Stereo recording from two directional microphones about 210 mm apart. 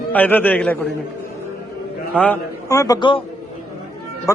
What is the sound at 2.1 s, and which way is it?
A man's voice, 10° left (ahead or behind).